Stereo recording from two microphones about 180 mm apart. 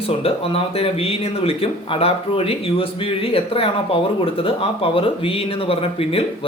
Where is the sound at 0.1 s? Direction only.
30° left (ahead or behind).